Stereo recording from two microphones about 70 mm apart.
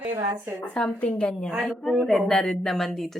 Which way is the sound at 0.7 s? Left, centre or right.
Centre.